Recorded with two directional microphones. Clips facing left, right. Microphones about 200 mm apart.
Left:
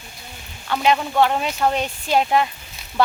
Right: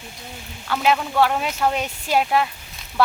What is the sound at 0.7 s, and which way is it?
Speech, centre (ahead or behind).